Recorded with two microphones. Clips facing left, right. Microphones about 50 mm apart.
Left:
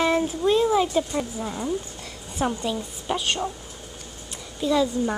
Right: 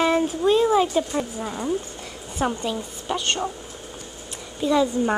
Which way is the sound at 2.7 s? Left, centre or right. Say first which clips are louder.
Even; centre.